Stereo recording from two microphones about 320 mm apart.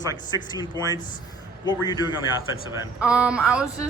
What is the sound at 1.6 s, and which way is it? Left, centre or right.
Speech, centre.